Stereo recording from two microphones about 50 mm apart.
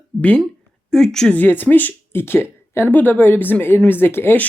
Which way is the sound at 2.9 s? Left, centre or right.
Left.